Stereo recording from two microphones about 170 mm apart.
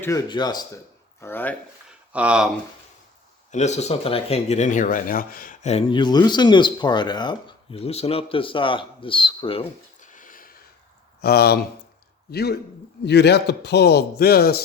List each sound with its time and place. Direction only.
0.0 s speech: 20° left (ahead or behind)
1.2 s speech: 10° left (ahead or behind)
2.1 s speech: 5° right (ahead or behind)
3.5 s speech: 40° left (ahead or behind)
5.6 s speech: 35° left (ahead or behind)
10.0 s a sound: 50° left (ahead or behind)
11.2 s a man's voice: 65° left (ahead or behind)